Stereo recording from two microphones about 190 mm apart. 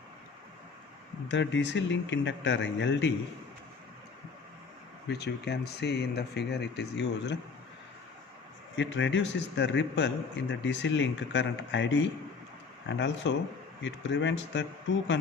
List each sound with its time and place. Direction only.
1.3 s speech: 70° left (ahead or behind)
5.0 s speech: 60° left (ahead or behind)
8.7 s speech: 75° left (ahead or behind)